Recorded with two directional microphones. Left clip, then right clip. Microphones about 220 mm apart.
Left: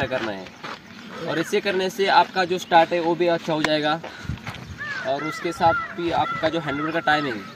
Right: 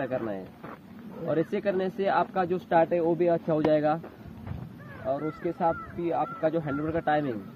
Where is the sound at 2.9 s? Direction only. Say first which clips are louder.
Left 4 dB; 20° left (ahead or behind).